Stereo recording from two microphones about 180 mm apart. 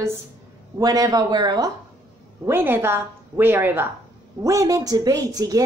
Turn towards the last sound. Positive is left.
turn(degrees=-20)  # may be behind; listen again after turning